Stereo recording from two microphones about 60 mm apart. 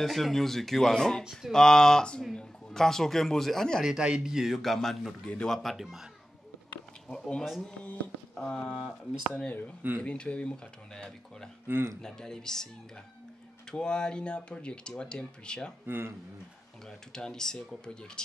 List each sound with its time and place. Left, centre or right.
0.0 s speech: centre
3.8 s a man's voice: centre
4.6 s speech: centre
7.1 s speech: centre
8.6 s a man's voice: centre
9.3 s speech: left
11.6 s speech: right
12.0 s speech: centre
15.9 s speech: right
16.8 s speech: centre